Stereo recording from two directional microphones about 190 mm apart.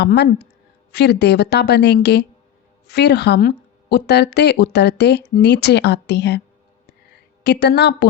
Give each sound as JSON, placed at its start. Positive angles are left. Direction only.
{"t": 0.0, "sound": "a woman's voice", "side_deg": 60}
{"t": 7.4, "sound": "a woman's voice", "side_deg": 60}